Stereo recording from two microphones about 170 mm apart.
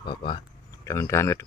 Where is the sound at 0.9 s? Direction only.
15° left (ahead or behind).